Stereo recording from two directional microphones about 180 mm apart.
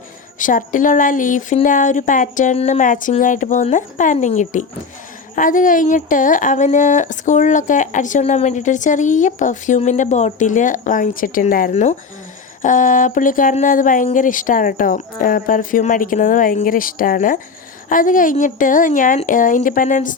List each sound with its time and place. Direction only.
0.3 s speech: 45° left (ahead or behind)